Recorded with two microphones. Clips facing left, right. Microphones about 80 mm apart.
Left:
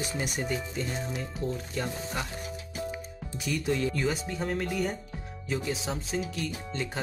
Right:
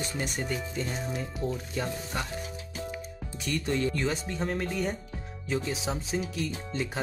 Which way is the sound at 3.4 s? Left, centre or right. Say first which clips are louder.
Even; centre.